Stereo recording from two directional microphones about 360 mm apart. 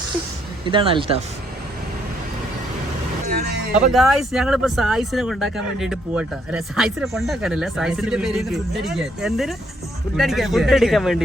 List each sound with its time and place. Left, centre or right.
0.6 s speech: centre
3.3 s a sound: right
3.9 s speech: centre